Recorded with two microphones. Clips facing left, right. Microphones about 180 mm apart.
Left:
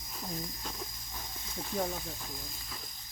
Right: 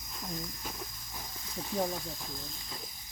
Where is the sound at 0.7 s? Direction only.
5° right (ahead or behind).